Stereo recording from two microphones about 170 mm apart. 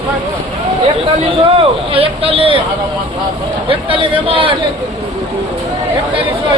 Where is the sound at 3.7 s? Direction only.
30° right (ahead or behind).